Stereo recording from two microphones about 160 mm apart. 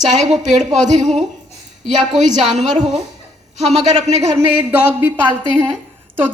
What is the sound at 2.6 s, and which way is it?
Speech, 45° right (ahead or behind).